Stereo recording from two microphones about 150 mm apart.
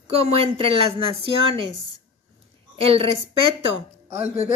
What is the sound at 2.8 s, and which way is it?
Speech, 40° right (ahead or behind).